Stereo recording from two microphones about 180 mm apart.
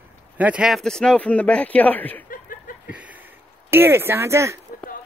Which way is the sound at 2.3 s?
50° left (ahead or behind).